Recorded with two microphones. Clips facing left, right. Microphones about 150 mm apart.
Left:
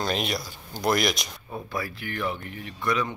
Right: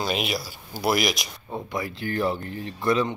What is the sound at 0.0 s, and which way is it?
Speech, 5° right (ahead or behind).